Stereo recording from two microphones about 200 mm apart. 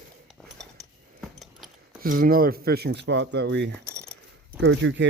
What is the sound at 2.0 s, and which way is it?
Speech, 45° right (ahead or behind).